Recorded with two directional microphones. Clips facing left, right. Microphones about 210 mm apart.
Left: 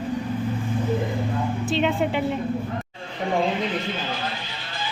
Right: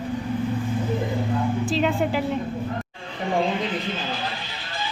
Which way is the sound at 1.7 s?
Centre (ahead or behind).